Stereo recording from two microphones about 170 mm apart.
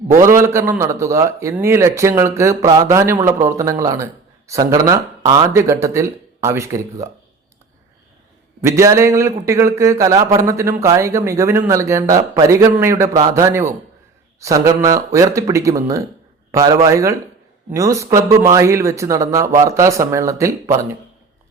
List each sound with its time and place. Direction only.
0.1 s a man's voice: 15° right (ahead or behind)
8.6 s a man's voice: 15° right (ahead or behind)